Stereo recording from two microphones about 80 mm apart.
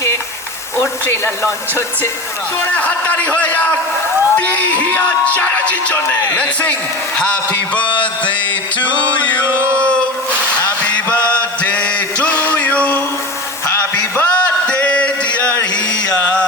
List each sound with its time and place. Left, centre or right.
0.8 s speech: left
2.7 s speech: centre
9.5 s chant: right
9.7 s a sound: centre
11.6 s male singing: centre
14.7 s a sound: centre